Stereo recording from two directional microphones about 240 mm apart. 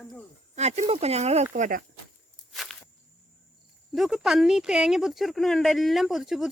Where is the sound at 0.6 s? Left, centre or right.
Right.